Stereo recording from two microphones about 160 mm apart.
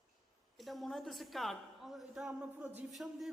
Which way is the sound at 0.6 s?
Centre (ahead or behind).